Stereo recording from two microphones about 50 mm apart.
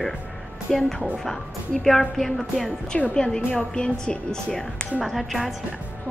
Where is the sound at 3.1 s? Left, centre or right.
Centre.